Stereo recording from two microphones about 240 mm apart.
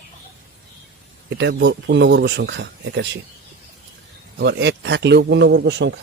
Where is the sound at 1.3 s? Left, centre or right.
Right.